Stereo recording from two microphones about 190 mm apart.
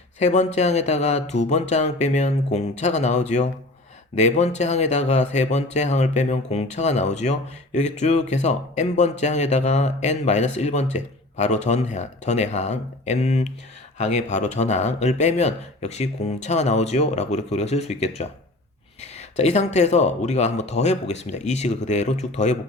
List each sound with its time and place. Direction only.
0.2 s speech: 40° left (ahead or behind)